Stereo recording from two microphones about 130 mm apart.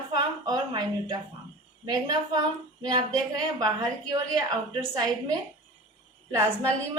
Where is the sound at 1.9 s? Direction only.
30° right (ahead or behind).